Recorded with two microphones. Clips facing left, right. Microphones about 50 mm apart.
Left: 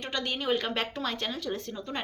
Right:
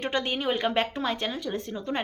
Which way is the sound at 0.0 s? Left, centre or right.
Right.